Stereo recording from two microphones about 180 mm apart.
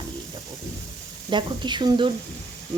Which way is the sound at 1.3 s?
25° right (ahead or behind).